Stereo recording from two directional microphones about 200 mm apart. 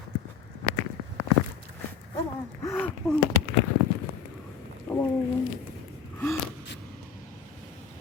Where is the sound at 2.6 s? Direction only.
10° left (ahead or behind).